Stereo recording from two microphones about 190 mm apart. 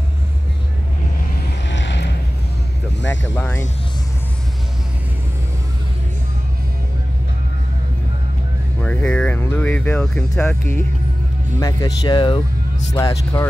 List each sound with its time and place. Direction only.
1.7 s a sound: 70° left (ahead or behind)
3.0 s speech: 75° left (ahead or behind)
3.3 s speech: 10° left (ahead or behind)
8.8 s speech: 5° left (ahead or behind)
11.6 s speech: 20° left (ahead or behind)
12.9 s speech: 15° left (ahead or behind)